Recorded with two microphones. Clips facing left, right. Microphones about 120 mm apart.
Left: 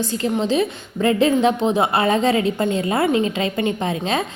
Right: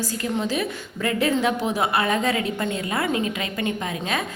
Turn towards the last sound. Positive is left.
turn(degrees=25)  # may be behind; listen again after turning